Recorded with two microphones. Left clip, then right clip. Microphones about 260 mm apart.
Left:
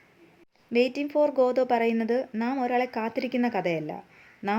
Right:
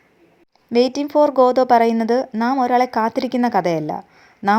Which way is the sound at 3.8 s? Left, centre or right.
Right.